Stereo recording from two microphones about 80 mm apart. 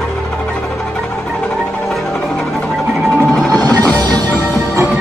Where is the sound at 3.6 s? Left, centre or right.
Right.